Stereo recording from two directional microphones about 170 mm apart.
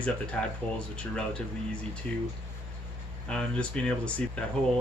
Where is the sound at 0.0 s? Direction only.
5° left (ahead or behind).